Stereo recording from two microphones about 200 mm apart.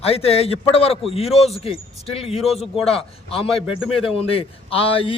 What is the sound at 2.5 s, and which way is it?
Speech, centre (ahead or behind).